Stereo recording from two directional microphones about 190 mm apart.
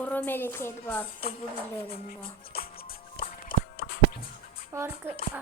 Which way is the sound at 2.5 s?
55° left (ahead or behind).